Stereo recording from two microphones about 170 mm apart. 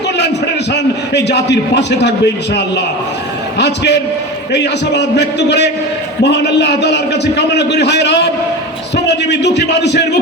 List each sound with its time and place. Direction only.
0.7 s a man's voice: 85° left